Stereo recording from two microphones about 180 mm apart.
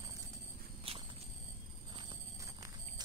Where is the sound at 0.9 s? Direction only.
30° right (ahead or behind).